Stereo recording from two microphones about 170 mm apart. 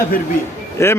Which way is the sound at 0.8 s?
15° left (ahead or behind).